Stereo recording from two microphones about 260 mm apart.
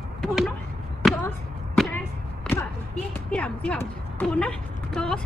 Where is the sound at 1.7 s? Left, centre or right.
Centre.